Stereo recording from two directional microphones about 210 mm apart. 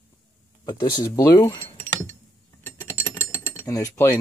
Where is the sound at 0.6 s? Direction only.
20° left (ahead or behind).